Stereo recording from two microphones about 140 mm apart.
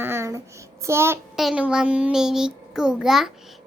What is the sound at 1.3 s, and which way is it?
A child's voice, 5° right (ahead or behind).